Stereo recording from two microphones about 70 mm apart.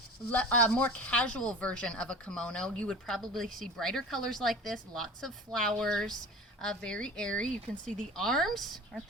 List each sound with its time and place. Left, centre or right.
0.3 s speech: centre